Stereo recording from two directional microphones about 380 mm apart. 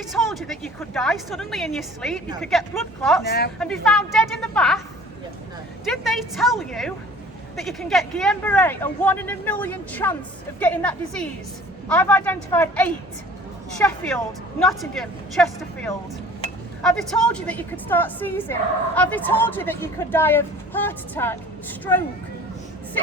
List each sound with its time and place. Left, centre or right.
0.1 s a woman's voice: centre
3.2 s speech: left
3.6 s a woman's voice: centre
5.8 s a woman's voice: centre